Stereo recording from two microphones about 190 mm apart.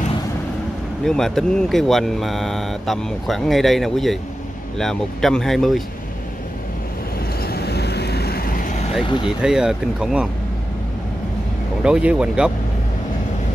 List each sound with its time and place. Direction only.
1.0 s speech: 5° left (ahead or behind)
7.4 s vehicle: 55° left (ahead or behind); by 8.9 s 40° left (ahead or behind)
9.0 s speech: 25° left (ahead or behind)
9.4 s speech: 5° right (ahead or behind)
11.8 s speech: 5° right (ahead or behind)